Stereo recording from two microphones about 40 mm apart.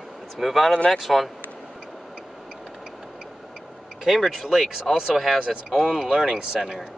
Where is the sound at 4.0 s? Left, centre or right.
Centre.